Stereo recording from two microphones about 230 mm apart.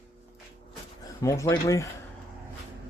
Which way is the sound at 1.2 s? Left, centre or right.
Centre.